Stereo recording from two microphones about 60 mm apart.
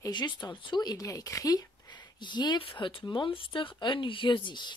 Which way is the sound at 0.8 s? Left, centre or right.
Left.